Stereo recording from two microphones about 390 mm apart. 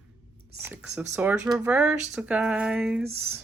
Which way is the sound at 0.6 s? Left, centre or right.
Centre.